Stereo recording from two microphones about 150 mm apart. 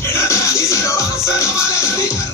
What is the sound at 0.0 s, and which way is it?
Music, 20° left (ahead or behind).